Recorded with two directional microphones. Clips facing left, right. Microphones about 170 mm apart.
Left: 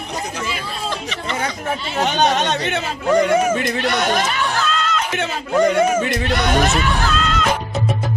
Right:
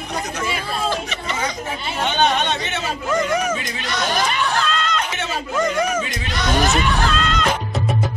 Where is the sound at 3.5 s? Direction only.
60° left (ahead or behind).